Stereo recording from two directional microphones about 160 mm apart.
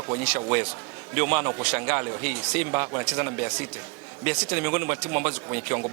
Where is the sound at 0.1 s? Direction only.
25° right (ahead or behind).